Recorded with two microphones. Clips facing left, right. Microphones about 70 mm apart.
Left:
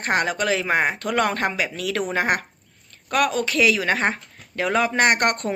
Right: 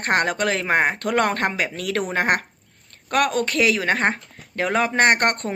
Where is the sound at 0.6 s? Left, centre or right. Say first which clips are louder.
Right 1 dB; right.